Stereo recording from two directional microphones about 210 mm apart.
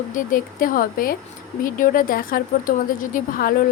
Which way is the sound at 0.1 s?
40° left (ahead or behind).